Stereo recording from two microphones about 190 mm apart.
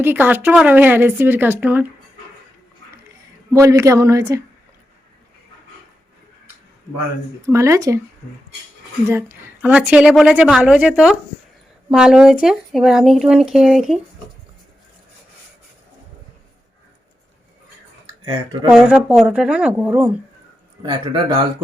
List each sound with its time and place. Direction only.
0.0 s speech: 10° right (ahead or behind)
3.5 s speech: 15° right (ahead or behind)
7.4 s speech: 15° right (ahead or behind)
9.0 s a woman's voice: 15° right (ahead or behind)
18.7 s a woman's voice: 5° right (ahead or behind)
20.8 s speech: 25° right (ahead or behind)